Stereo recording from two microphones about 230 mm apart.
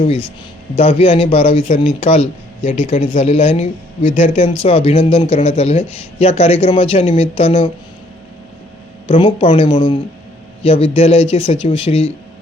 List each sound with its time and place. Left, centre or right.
0.0 s speech: left
4.4 s speech: left
9.0 s speech: left